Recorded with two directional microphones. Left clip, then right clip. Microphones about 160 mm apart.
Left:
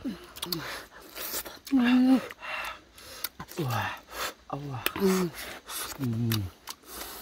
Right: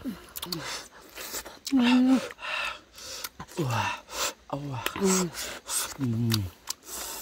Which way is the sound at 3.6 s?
65° right (ahead or behind).